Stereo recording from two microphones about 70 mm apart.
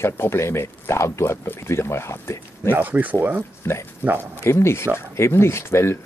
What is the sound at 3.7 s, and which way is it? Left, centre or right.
Speech, left.